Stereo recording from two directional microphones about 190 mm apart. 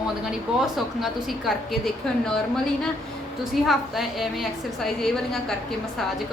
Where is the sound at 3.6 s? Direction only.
Centre (ahead or behind).